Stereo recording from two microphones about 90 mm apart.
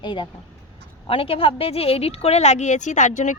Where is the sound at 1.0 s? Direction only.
90° left.